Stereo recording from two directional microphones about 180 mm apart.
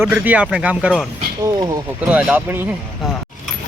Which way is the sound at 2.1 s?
5° right (ahead or behind).